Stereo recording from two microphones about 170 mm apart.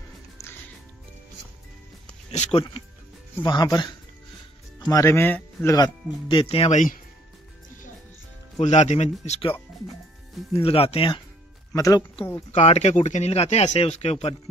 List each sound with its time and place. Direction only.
0.4 s music: 20° left (ahead or behind)
2.3 s speech: 40° left (ahead or behind)
3.4 s speech: 25° left (ahead or behind)
6.4 s speech: 35° left (ahead or behind)
8.5 s speech: 40° left (ahead or behind)
11.7 s speech: 20° left (ahead or behind)
12.5 s speech: 40° left (ahead or behind)